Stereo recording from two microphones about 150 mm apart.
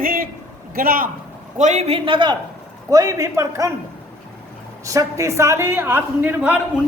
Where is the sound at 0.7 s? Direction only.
75° right (ahead or behind).